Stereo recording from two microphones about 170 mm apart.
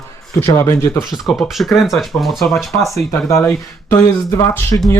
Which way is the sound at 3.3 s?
15° left (ahead or behind).